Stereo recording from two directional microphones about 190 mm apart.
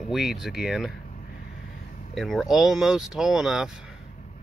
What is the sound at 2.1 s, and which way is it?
Speech, centre (ahead or behind).